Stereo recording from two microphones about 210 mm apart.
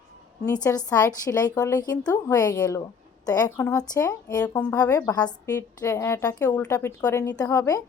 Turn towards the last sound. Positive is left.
turn(degrees=15)  # may be behind; listen again after turning